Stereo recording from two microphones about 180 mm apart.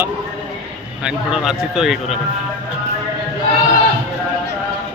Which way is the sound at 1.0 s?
5° right (ahead or behind).